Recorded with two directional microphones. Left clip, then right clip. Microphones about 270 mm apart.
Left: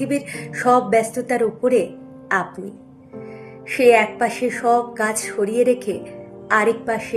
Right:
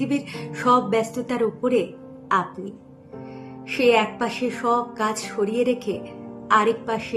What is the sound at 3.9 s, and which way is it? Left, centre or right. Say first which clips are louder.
Speech: left 5 dB; centre.